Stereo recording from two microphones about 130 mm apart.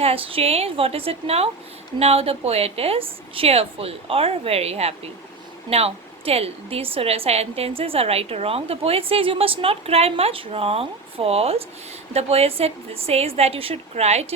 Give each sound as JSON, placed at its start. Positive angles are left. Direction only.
{"t": 0.0, "sound": "a woman's voice", "side_deg": -50}